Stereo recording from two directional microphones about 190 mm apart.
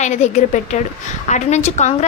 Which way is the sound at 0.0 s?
40° left (ahead or behind).